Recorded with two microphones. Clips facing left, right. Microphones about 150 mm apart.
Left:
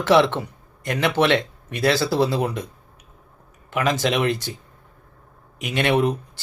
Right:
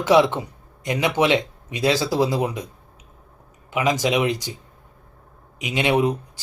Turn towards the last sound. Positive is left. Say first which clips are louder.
# even
turn(degrees=-15)  # may be behind; listen again after turning